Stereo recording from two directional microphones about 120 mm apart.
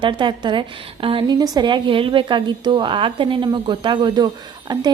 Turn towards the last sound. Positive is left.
turn(degrees=-35)  # may be behind; listen again after turning